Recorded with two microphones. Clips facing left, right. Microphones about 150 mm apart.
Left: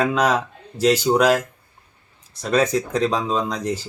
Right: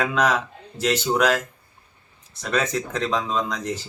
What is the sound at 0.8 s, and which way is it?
Speech, 35° left (ahead or behind).